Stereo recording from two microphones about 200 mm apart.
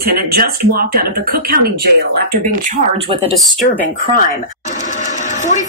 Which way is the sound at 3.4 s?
Centre (ahead or behind).